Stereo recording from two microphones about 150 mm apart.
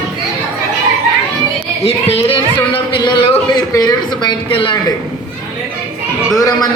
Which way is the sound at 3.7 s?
25° left (ahead or behind).